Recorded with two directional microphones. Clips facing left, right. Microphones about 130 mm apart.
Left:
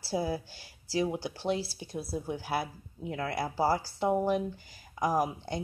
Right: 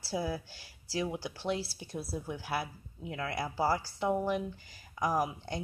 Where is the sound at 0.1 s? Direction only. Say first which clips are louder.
Left 3 dB; 30° left (ahead or behind).